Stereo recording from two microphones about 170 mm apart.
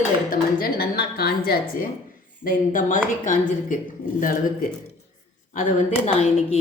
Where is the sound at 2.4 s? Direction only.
50° left (ahead or behind).